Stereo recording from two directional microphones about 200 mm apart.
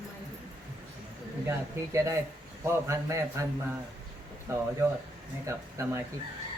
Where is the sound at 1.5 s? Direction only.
15° right (ahead or behind).